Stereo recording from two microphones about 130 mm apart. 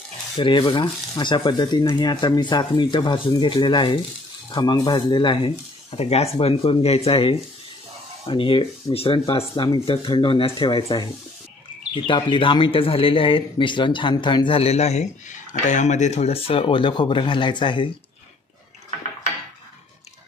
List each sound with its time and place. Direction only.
0.4 s speech: 40° left (ahead or behind)